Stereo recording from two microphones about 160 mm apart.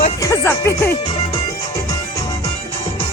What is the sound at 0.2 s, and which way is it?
Music, 20° left (ahead or behind).